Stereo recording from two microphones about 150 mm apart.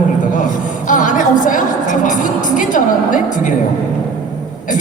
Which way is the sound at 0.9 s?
60° left (ahead or behind).